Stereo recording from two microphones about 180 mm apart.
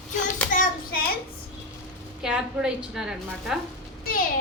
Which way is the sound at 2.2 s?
5° right (ahead or behind).